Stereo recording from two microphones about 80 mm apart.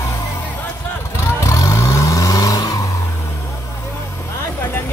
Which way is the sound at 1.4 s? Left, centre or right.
Left.